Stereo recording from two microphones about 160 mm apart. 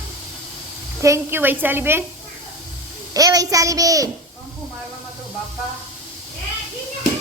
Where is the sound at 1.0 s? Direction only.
15° right (ahead or behind).